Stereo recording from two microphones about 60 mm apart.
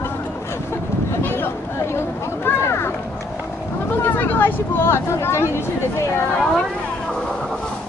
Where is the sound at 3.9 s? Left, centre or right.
Left.